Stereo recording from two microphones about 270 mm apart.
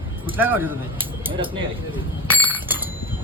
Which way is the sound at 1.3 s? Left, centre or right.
Centre.